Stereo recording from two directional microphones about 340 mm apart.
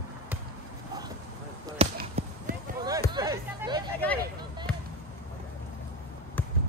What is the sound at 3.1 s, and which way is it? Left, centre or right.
Hubbub, centre.